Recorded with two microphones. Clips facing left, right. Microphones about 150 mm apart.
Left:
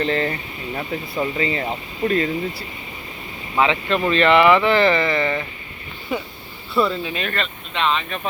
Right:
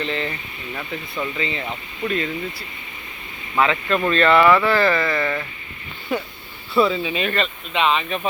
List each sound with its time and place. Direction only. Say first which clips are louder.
0.0 s speech: left 5 dB; 45° left (ahead or behind)
0.7 s speech: left 4 dB; 30° left (ahead or behind)
3.5 s speech: even; 20° left (ahead or behind)
6.1 s speech: right 1 dB; 5° left (ahead or behind)